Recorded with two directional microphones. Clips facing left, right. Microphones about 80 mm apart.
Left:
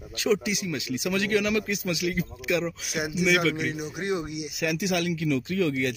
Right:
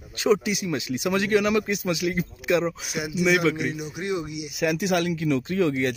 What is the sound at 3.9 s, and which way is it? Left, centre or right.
Speech, left.